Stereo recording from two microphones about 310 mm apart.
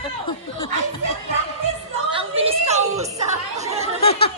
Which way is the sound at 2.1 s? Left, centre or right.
Centre.